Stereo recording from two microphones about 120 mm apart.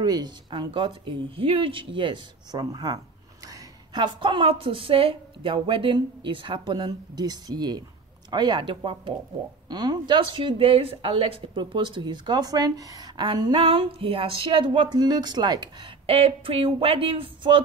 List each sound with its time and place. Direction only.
0.0 s a woman's voice: 35° right (ahead or behind)
16.1 s a woman's voice: 50° right (ahead or behind)